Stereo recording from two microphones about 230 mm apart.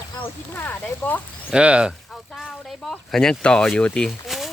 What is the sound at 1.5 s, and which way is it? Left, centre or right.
Speech, centre.